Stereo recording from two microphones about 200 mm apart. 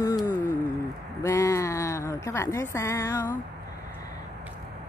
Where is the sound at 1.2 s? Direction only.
15° left (ahead or behind).